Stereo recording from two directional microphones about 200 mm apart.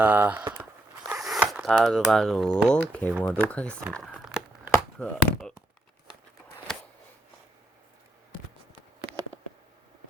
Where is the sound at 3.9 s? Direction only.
Centre (ahead or behind).